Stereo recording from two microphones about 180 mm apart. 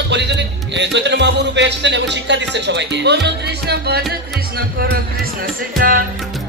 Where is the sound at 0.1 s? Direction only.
75° right (ahead or behind); by 6.0 s 50° right (ahead or behind).